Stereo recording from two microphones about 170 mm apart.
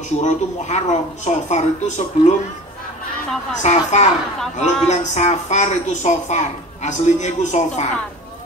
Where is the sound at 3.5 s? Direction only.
40° left (ahead or behind).